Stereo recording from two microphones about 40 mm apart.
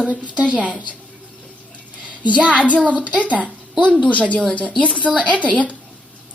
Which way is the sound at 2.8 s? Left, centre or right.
Right.